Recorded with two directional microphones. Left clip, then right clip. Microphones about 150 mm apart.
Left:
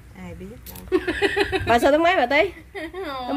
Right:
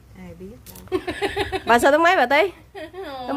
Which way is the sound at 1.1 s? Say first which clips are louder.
Left 3 dB; 50° right (ahead or behind).